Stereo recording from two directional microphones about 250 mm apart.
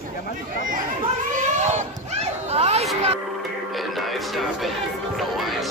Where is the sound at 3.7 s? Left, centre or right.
Centre.